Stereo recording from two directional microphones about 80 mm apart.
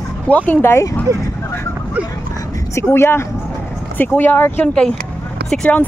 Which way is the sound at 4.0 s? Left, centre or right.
Left.